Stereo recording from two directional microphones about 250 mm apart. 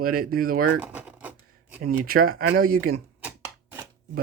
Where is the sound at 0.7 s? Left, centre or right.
Centre.